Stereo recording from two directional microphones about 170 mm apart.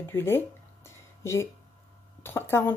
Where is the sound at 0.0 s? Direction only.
15° left (ahead or behind).